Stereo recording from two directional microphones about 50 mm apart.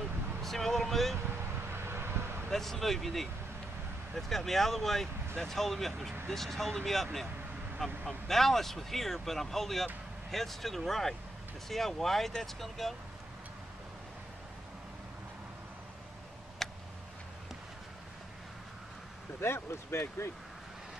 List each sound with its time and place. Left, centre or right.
0.4 s speech: centre
1.7 s vehicle: right
2.5 s speech: centre
16.6 s tick: centre
19.4 s speech: left